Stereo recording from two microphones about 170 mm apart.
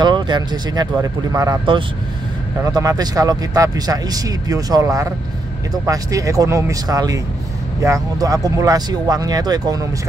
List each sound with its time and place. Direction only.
0.0 s speech: 25° right (ahead or behind)